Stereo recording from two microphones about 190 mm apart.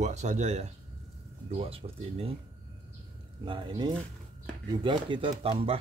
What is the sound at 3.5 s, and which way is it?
Speech, 25° right (ahead or behind).